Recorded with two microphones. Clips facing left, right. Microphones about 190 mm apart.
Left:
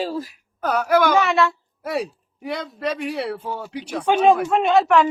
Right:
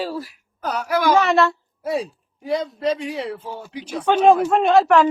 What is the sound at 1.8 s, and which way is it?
Speech, 65° left (ahead or behind).